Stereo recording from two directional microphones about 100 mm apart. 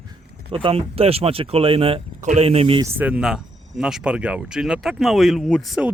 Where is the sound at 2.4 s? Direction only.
85° right.